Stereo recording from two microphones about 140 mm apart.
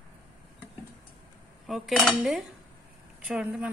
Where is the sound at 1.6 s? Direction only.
Centre (ahead or behind).